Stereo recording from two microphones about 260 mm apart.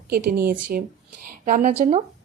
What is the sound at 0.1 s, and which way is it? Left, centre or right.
A woman's voice, right.